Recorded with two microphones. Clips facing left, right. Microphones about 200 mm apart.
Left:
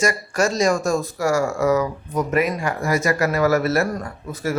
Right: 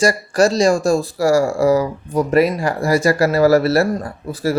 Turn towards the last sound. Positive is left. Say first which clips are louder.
# right 5 dB
turn(degrees=-35)  # may be behind; listen again after turning